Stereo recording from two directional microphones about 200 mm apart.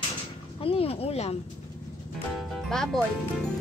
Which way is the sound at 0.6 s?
30° left (ahead or behind).